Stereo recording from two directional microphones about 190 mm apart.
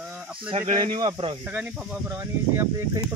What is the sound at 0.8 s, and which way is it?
Speech, 25° right (ahead or behind).